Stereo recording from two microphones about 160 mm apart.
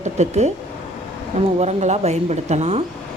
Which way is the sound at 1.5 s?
45° right (ahead or behind).